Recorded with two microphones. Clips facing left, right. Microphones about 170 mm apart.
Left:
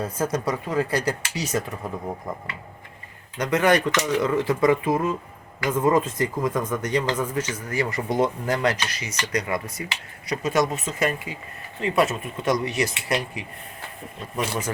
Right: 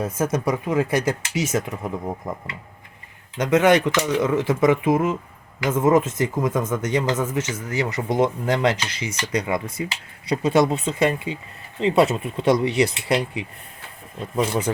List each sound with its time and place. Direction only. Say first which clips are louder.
0.0 s speech: right 3 dB; 20° right (ahead or behind)
3.3 s speech: right 3 dB; 20° right (ahead or behind)
3.9 s speech: right 2 dB; 5° right (ahead or behind)
4.4 s speech: right 1 dB; 20° right (ahead or behind)